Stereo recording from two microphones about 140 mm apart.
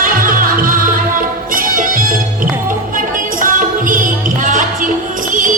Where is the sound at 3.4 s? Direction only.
75° right (ahead or behind).